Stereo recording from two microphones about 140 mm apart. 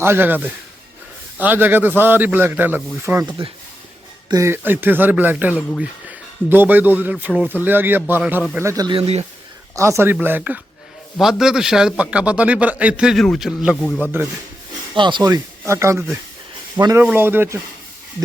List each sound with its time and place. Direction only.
0.0 s speech: 15° right (ahead or behind)
3.2 s speech: 40° right (ahead or behind)
4.3 s speech: 20° right (ahead or behind)
8.9 s speech: 45° right (ahead or behind)
9.7 s a man's voice: 20° right (ahead or behind); by 13.7 s centre (ahead or behind)
13.8 s speech: 10° left (ahead or behind)
14.9 s speech: 35° right (ahead or behind); by 17.6 s 15° right (ahead or behind)